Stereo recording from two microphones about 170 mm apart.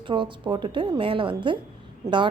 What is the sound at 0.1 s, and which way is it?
Speech, 30° right (ahead or behind).